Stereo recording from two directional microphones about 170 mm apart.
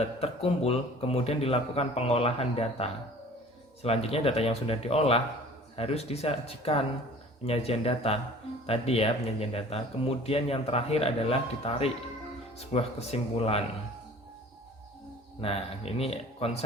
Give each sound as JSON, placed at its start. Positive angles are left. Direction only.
{"t": 0.0, "sound": "a man's voice", "side_deg": 35}
{"t": 15.4, "sound": "a man's voice", "side_deg": 35}